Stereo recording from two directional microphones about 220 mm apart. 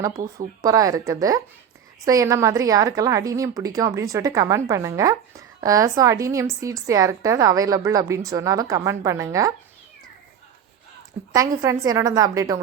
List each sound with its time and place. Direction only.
0.3 s a woman's voice: 15° right (ahead or behind)
11.3 s a woman's voice: 15° right (ahead or behind)